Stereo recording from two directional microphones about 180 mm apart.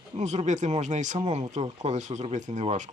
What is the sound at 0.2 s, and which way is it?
Speech, 40° right (ahead or behind).